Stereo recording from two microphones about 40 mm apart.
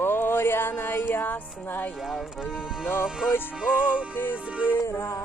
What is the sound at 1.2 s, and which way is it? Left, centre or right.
Music, left.